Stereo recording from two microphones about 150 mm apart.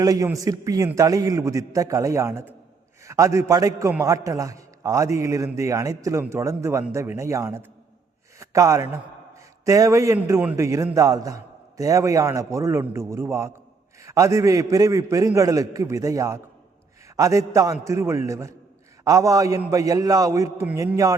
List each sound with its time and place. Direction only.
0.0 s a man's voice: 25° right (ahead or behind)